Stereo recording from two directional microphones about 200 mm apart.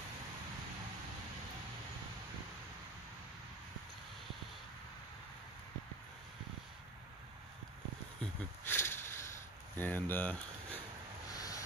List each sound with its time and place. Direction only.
8.2 s a sound: 10° left (ahead or behind)
9.8 s speech: 10° left (ahead or behind)
11.3 s vehicle: 15° left (ahead or behind)